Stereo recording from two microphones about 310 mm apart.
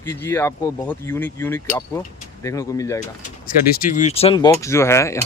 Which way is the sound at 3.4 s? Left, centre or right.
Left.